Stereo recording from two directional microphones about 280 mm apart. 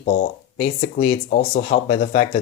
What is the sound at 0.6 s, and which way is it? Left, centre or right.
Speech, left.